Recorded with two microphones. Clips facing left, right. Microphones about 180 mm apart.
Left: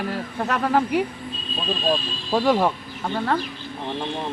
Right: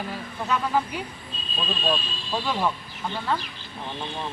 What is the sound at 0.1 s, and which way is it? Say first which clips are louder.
Speech: left 3 dB; 65° left (ahead or behind).